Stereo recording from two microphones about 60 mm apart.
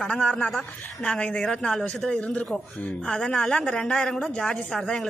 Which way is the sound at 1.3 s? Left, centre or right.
Centre.